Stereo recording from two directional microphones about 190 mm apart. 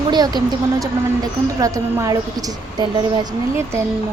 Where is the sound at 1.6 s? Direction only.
15° right (ahead or behind).